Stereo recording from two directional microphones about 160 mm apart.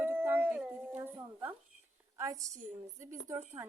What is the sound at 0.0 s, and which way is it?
Dog, 15° right (ahead or behind).